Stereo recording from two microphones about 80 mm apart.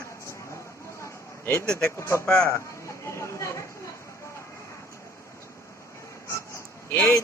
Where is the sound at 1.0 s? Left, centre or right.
Left.